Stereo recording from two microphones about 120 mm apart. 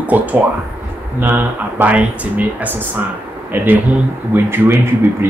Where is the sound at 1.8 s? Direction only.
10° right (ahead or behind).